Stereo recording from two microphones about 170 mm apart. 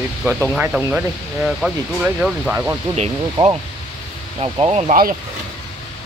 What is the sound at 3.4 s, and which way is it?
Speech, 25° right (ahead or behind).